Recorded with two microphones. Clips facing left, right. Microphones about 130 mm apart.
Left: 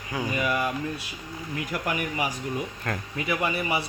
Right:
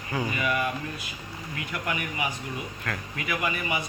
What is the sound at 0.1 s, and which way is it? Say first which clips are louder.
Speech: right 1 dB; 10° left (ahead or behind).